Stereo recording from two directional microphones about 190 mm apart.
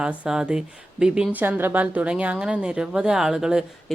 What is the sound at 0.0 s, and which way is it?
A woman's voice, 5° right (ahead or behind).